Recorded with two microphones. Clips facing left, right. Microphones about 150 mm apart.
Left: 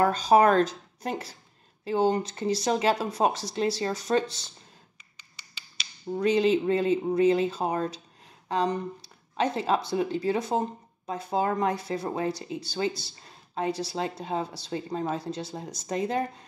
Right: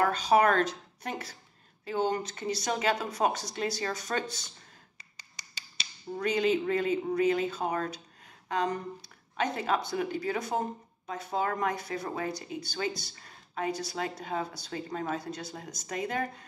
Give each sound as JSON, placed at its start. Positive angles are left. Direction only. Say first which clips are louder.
{"t": 0.0, "sound": "speech", "louder": "left 4 dB", "side_deg": 35}
{"t": 6.1, "sound": "speech", "louder": "left 5 dB", "side_deg": 30}
{"t": 9.0, "sound": "speech", "louder": "left 5 dB", "side_deg": 30}